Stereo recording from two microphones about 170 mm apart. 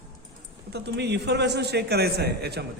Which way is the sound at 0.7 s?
80° right.